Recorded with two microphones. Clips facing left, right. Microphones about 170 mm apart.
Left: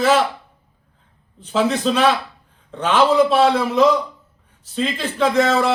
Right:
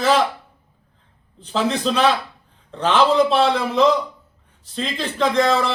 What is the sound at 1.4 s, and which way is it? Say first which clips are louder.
A man's voice: left 2 dB; 5° left (ahead or behind).